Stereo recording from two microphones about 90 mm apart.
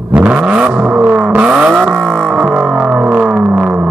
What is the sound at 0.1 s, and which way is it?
Vehicle, 15° right (ahead or behind).